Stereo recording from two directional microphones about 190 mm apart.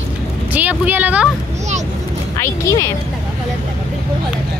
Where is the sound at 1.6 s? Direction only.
40° right (ahead or behind).